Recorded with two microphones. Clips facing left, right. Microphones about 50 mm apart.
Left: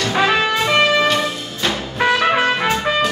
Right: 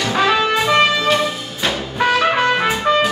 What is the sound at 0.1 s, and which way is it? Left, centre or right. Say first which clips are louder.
Music: right 1 dB; centre.